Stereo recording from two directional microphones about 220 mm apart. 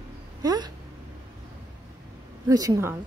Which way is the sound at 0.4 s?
20° right (ahead or behind).